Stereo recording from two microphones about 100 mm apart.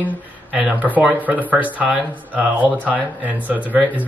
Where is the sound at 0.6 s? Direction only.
15° right (ahead or behind).